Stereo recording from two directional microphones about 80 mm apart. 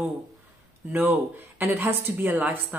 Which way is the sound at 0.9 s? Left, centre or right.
Right.